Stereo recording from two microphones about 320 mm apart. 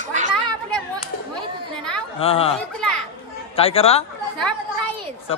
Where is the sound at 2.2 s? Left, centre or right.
Centre.